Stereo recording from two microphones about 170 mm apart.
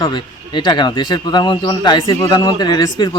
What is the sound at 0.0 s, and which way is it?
Speech, 30° left (ahead or behind).